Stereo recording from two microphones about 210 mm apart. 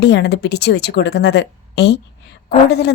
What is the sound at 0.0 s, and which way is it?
Speech, 50° left (ahead or behind).